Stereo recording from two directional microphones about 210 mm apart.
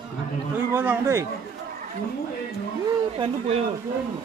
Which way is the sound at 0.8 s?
10° right (ahead or behind).